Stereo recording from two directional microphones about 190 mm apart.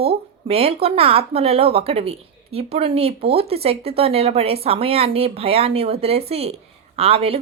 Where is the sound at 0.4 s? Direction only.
30° right (ahead or behind).